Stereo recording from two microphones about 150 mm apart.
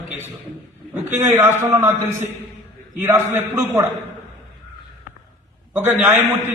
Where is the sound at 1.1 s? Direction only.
15° right (ahead or behind).